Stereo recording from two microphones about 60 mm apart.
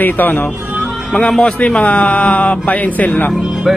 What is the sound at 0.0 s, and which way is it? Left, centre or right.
Speech, left.